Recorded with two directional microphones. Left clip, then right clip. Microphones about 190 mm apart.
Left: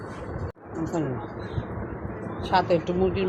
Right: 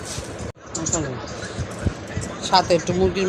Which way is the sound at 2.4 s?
25° right (ahead or behind).